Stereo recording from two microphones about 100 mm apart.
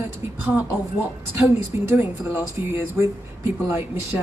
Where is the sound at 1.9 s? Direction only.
25° right (ahead or behind).